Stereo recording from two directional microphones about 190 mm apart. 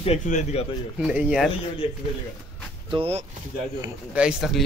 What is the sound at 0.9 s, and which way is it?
Speech, 5° right (ahead or behind).